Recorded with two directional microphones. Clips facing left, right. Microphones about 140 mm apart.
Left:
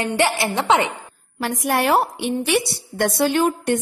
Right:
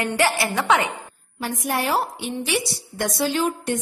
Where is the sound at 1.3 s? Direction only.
75° left (ahead or behind).